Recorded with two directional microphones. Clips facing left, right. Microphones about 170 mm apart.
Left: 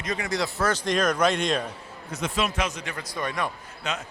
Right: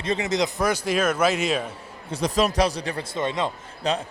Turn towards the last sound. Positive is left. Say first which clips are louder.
# right 7 dB
turn(degrees=-35)  # may be behind; listen again after turning